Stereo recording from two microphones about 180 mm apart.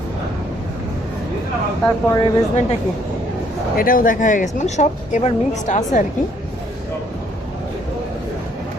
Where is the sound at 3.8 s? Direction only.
50° left (ahead or behind).